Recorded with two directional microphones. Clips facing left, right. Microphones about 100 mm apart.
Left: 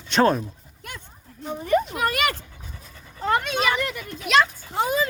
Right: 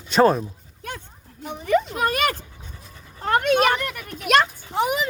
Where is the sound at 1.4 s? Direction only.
85° right.